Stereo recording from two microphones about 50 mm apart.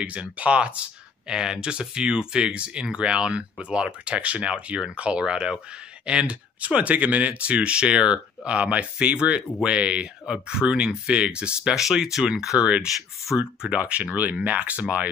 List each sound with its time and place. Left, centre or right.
0.0 s speech: right
11.7 s speech: centre
12.5 s speech: right